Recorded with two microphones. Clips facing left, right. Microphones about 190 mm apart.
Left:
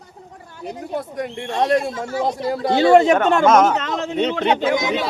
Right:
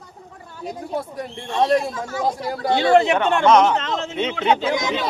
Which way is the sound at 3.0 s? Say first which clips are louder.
Left 3 dB; 45° left (ahead or behind).